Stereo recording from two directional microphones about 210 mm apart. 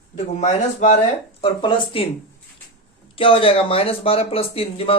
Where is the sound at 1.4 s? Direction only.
25° left (ahead or behind).